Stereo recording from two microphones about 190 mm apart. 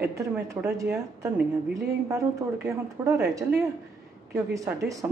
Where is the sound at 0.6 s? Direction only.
15° right (ahead or behind).